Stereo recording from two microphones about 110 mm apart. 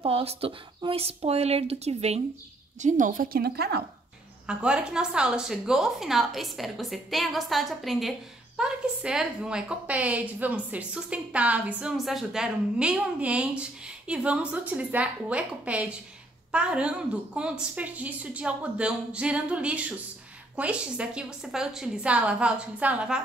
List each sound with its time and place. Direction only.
0.0 s speech: 60° right (ahead or behind)
2.8 s a woman's voice: 90° right
4.5 s a woman's voice: 10° right (ahead or behind)